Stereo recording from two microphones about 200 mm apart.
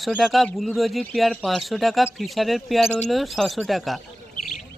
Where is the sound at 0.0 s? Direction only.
Centre (ahead or behind).